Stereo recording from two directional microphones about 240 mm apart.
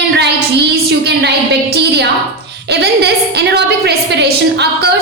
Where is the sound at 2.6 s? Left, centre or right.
Right.